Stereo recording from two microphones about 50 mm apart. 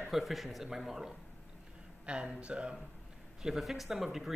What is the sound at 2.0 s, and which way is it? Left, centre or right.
Speech, right.